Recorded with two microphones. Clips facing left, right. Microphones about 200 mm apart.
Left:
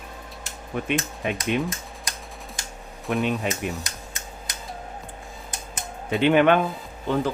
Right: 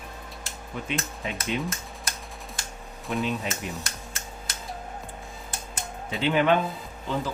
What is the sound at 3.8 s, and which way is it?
Computer keyboard, 15° left (ahead or behind).